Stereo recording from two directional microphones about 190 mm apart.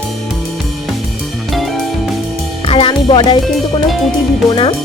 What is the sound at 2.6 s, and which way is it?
Speech, 30° left (ahead or behind).